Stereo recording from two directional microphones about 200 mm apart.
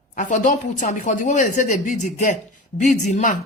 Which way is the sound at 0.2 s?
40° left (ahead or behind).